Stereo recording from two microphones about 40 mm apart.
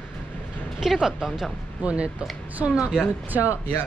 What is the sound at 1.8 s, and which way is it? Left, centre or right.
A woman's voice, right.